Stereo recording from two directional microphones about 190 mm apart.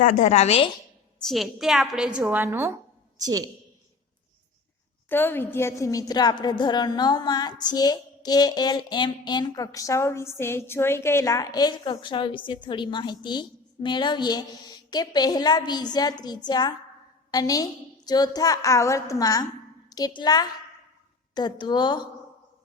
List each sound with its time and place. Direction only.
0.0 s a woman's voice: 40° left (ahead or behind)
1.3 s a woman's voice: centre (ahead or behind); by 3.5 s 20° right (ahead or behind)
5.0 s a woman's voice: 10° left (ahead or behind)